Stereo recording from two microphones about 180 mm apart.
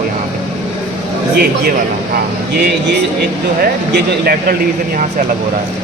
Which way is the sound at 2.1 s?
65° right (ahead or behind).